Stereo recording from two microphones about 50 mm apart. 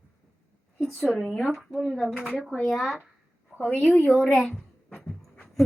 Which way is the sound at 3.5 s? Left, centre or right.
Centre.